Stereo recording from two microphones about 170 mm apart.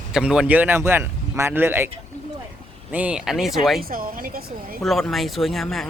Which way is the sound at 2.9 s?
5° right (ahead or behind).